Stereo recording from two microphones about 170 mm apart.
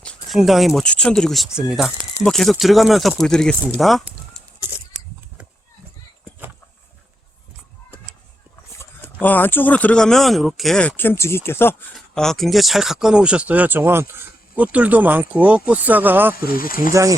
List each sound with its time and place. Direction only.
0.0 s speech: 5° left (ahead or behind)
3.8 s a sound: centre (ahead or behind)
9.2 s speech: 10° left (ahead or behind)
11.9 s speech: centre (ahead or behind)
16.6 s speech: 55° left (ahead or behind)
16.9 s speech: 20° right (ahead or behind)